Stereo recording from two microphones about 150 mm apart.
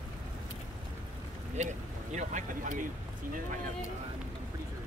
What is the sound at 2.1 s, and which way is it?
Speech, 55° right (ahead or behind).